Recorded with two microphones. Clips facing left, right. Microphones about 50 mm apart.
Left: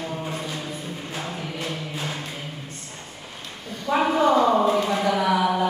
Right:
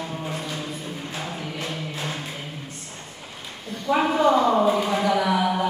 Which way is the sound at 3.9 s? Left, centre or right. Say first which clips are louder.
Left 1 dB; centre.